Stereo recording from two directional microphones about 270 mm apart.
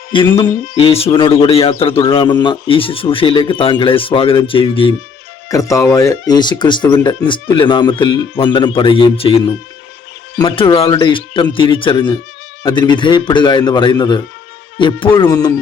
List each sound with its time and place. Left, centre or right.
0.3 s speech: centre
0.7 s speech: left